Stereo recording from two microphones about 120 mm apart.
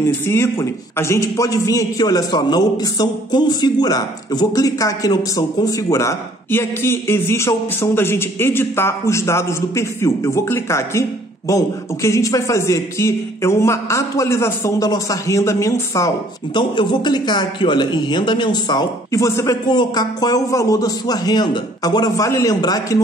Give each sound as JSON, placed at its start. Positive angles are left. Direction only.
{"t": 0.3, "sound": "a man's voice", "side_deg": 20}
{"t": 16.5, "sound": "a man's voice", "side_deg": 40}
{"t": 19.7, "sound": "a man's voice", "side_deg": 35}